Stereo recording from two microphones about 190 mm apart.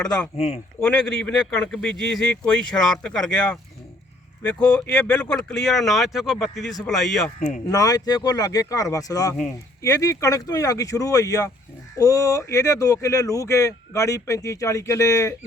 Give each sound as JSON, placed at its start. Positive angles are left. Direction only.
{"t": 0.3, "sound": "speech", "side_deg": 35}
{"t": 0.8, "sound": "speech", "side_deg": 5}
{"t": 7.3, "sound": "speech", "side_deg": 40}
{"t": 7.7, "sound": "speech", "side_deg": 20}